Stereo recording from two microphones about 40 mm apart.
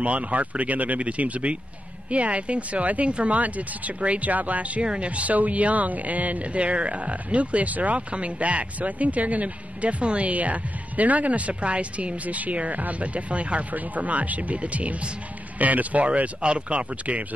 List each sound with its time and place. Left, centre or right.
0.0 s speech: right
4.8 s speech: right